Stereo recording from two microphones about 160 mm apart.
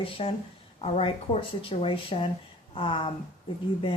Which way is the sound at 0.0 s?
35° left (ahead or behind).